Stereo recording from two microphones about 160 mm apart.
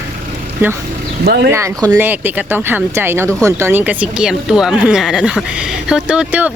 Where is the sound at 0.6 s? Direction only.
15° right (ahead or behind).